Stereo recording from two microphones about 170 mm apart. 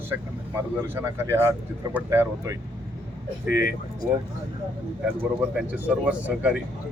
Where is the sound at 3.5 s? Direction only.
65° left (ahead or behind).